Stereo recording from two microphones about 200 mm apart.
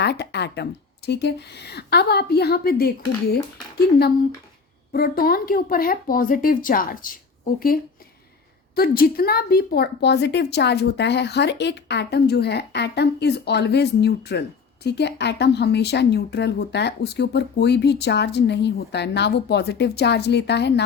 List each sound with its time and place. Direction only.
0.0 s a woman's voice: 55° left (ahead or behind)
4.9 s speech: 50° left (ahead or behind)
8.7 s a woman's voice: 50° left (ahead or behind)